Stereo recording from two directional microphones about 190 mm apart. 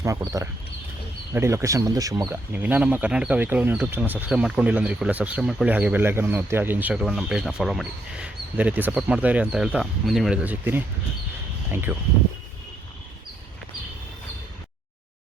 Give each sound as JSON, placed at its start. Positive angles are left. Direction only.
{"t": 0.0, "sound": "speech", "side_deg": -15}